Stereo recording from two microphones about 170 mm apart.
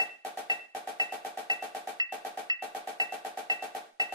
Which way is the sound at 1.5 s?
25° right (ahead or behind).